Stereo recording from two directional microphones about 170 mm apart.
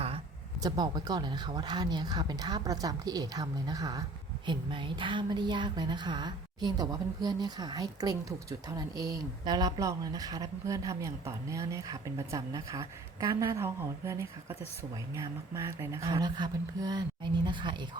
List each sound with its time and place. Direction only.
0.6 s a woman's voice: 25° right (ahead or behind)